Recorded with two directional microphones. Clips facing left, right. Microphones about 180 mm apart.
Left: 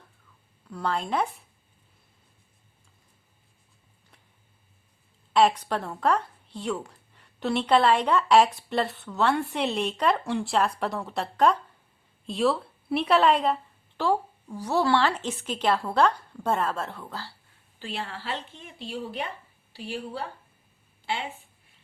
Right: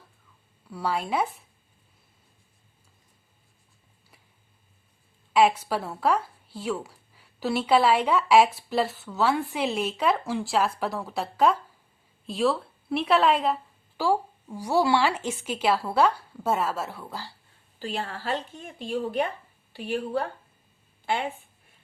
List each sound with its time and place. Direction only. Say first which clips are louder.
0.7 s a woman's voice: even; 5° right (ahead or behind)
5.3 s a woman's voice: even; 10° right (ahead or behind)
17.7 s speech: right 3 dB; 40° right (ahead or behind)